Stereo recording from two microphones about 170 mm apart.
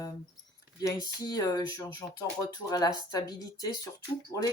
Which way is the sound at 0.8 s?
20° left (ahead or behind).